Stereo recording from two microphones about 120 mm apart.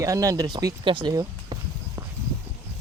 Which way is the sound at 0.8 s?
40° right (ahead or behind).